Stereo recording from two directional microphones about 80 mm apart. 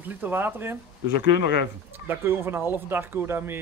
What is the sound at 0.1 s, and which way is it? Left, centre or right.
Speech, right.